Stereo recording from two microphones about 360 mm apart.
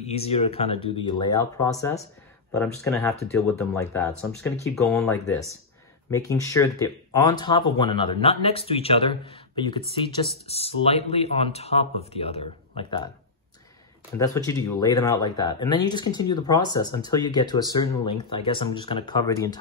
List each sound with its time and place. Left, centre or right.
0.0 s speech: centre
14.1 s speech: centre